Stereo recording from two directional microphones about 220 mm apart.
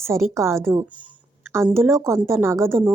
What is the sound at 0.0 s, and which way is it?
A woman's voice, 10° right (ahead or behind).